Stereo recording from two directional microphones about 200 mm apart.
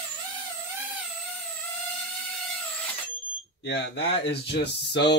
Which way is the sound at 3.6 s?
55° left (ahead or behind).